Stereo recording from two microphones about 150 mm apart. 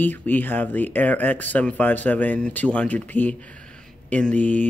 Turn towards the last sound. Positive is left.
turn(degrees=10)  # may be behind; listen again after turning